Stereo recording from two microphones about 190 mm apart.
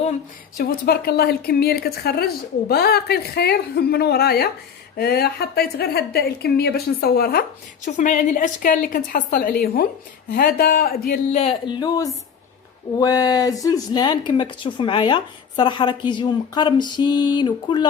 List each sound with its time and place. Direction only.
0.5 s speech: 50° left (ahead or behind)
7.9 s a woman's voice: 40° left (ahead or behind)
11.3 s speech: 35° left (ahead or behind)